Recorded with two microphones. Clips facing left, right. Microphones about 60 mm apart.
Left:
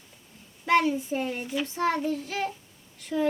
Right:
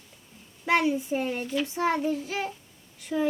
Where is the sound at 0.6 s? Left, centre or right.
Centre.